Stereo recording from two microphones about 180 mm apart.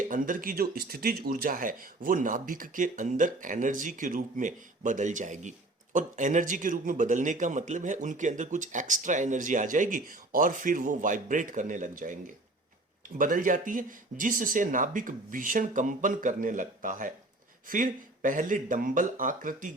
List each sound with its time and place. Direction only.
0.0 s speech: 50° right (ahead or behind)